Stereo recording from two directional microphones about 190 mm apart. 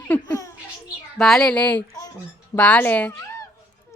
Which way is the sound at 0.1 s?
15° left (ahead or behind).